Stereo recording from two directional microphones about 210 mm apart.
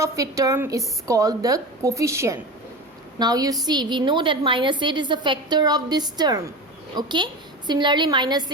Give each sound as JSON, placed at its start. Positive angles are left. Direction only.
{"t": 0.0, "sound": "a woman's voice", "side_deg": -15}